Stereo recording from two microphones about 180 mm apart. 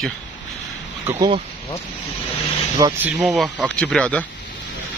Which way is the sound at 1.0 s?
30° right (ahead or behind).